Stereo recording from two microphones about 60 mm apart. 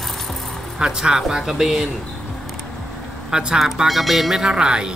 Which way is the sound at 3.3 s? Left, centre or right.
Centre.